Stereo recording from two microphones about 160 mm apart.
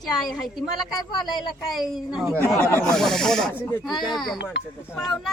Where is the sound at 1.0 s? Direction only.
25° left (ahead or behind).